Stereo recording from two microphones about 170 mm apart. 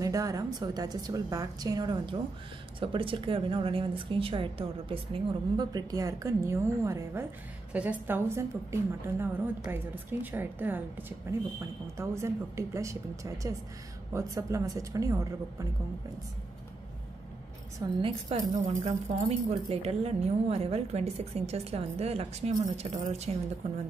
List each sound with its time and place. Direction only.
0.0 s a woman's voice: 20° right (ahead or behind)
17.8 s a woman's voice: 20° right (ahead or behind)
18.3 s speech: 35° right (ahead or behind)